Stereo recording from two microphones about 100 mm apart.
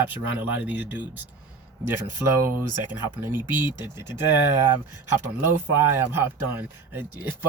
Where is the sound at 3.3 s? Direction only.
45° left (ahead or behind).